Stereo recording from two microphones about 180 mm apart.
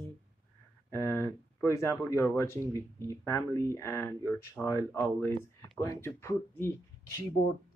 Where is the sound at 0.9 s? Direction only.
15° left (ahead or behind).